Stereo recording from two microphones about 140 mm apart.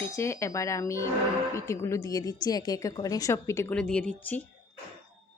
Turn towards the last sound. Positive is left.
turn(degrees=10)  # may be behind; listen again after turning